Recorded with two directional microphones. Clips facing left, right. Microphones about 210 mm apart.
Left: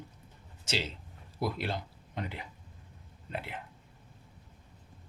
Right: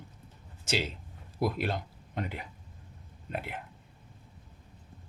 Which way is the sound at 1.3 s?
50° right (ahead or behind).